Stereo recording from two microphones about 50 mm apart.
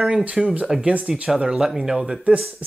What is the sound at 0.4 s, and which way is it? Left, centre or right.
Speech, centre.